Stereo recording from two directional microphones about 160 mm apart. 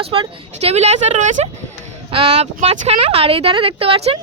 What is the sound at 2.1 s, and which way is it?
Speech, 35° right (ahead or behind).